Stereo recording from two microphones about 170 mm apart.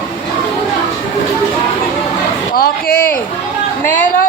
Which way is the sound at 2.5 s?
60° left (ahead or behind).